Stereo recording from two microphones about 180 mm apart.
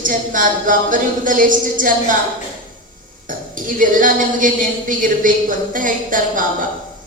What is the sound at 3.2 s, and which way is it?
A woman's voice, 50° right (ahead or behind).